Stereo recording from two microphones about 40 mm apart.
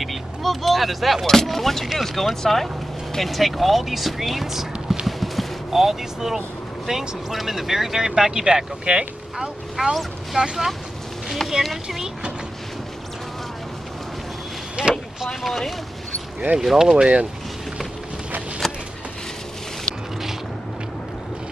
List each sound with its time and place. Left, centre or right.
0.0 s speech: centre
1.2 s speech: centre
5.0 s a sound: centre
5.7 s speech: centre
14.8 s vehicle: right
15.2 s speech: centre
16.5 s speech: centre
17.0 s speech: right
18.6 s a sound: centre